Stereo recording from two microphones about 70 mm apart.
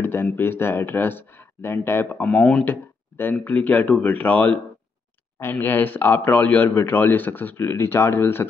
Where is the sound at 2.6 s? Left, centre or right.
Left.